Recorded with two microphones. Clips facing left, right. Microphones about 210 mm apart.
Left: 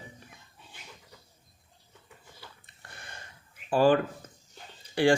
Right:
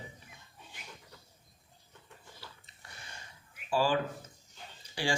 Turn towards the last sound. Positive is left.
turn(degrees=55)  # may be behind; listen again after turning